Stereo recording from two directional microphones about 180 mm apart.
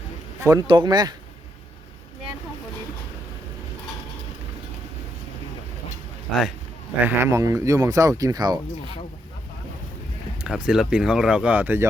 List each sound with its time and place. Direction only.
0.4 s speech: 25° right (ahead or behind)
7.0 s speech: 15° right (ahead or behind)
10.4 s speech: 5° right (ahead or behind)